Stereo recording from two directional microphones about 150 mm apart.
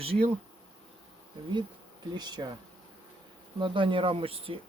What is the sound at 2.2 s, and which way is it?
Speech, 30° right (ahead or behind).